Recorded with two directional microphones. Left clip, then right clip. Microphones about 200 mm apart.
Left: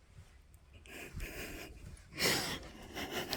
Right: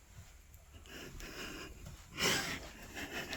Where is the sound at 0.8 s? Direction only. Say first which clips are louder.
Left 2 dB; 5° left (ahead or behind).